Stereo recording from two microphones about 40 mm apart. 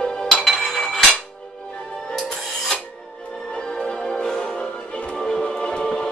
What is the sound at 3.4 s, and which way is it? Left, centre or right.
Music, centre.